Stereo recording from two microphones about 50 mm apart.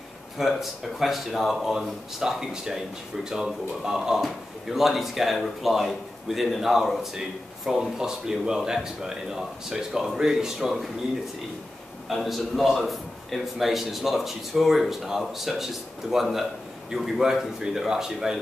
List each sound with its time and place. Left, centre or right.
0.4 s speech: centre
12.1 s speech: centre